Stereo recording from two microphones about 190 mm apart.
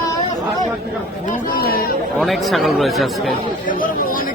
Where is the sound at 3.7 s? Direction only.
45° left (ahead or behind).